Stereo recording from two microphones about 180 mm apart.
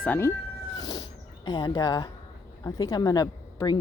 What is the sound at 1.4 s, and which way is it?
Speech, 25° left (ahead or behind).